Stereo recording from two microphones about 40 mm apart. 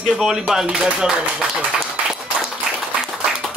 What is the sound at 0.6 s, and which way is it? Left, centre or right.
Speech, right.